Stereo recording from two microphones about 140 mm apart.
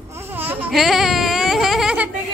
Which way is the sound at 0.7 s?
Centre (ahead or behind).